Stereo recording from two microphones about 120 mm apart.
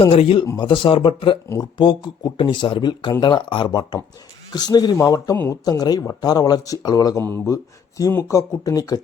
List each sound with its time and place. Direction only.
0.0 s speech: 50° left (ahead or behind); by 9.0 s 30° left (ahead or behind)